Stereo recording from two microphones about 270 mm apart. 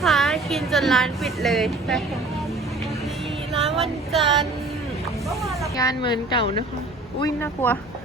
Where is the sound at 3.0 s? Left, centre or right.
Centre.